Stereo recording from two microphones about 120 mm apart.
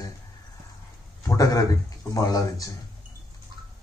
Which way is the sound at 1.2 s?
30° left (ahead or behind).